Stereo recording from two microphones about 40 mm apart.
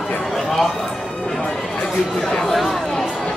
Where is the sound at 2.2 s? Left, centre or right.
Centre.